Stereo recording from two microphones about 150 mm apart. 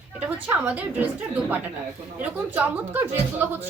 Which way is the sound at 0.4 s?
10° right (ahead or behind).